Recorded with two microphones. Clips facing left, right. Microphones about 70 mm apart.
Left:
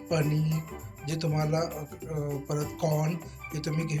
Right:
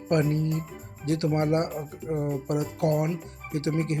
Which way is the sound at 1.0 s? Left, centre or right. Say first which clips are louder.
Right 6 dB; right.